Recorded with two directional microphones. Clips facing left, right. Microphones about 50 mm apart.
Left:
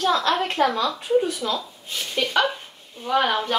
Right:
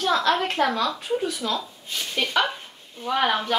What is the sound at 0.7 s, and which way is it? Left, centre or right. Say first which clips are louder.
Speech: left 4 dB; left.